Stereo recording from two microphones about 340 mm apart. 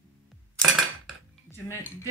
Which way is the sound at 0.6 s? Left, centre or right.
Centre.